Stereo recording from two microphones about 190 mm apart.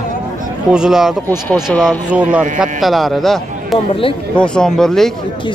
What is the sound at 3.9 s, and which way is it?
Speech, 30° left (ahead or behind).